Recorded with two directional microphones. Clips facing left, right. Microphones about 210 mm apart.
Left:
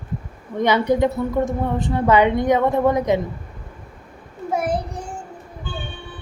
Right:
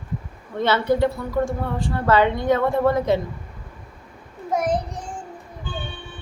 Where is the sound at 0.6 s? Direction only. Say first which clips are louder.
Left 2 dB; 15° left (ahead or behind).